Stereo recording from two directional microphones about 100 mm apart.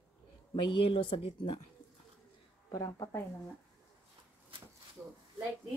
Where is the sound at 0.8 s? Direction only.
60° left (ahead or behind).